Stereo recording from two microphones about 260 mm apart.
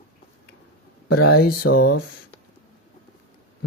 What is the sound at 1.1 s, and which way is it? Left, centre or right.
Speech, left.